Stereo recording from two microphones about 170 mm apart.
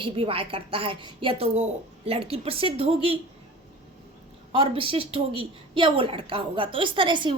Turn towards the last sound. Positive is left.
turn(degrees=-30)  # may be behind; listen again after turning